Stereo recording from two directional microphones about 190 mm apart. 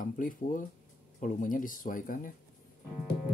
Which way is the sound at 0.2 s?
45° left (ahead or behind).